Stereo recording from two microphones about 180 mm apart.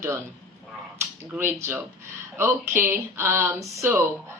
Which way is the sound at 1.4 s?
10° right (ahead or behind).